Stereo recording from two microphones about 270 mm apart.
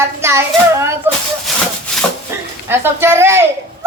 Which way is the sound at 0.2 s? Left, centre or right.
Centre.